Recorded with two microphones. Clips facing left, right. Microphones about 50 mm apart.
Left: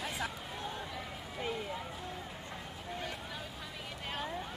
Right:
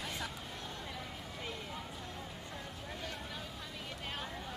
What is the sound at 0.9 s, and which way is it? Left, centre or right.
Run, centre.